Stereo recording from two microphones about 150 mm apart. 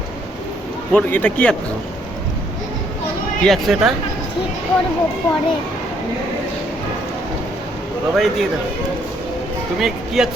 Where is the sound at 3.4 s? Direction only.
Centre (ahead or behind).